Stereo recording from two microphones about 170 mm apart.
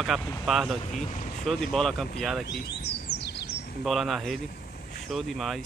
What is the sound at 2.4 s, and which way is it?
Bird, 75° left (ahead or behind).